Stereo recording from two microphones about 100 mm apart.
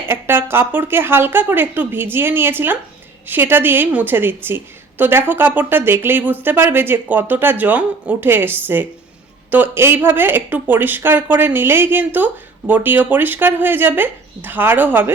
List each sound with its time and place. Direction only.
0.1 s a woman's voice: 20° right (ahead or behind)